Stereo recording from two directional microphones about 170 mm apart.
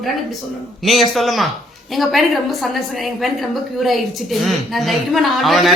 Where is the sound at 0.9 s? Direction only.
Centre (ahead or behind).